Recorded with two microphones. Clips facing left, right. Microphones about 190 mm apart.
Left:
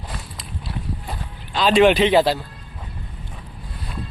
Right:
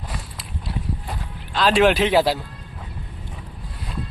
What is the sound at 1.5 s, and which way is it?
Speech, centre (ahead or behind).